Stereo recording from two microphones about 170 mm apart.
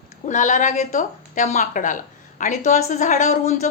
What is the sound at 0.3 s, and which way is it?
A woman's voice, 45° left (ahead or behind).